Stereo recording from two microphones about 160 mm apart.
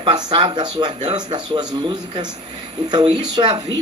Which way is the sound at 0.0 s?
30° right (ahead or behind).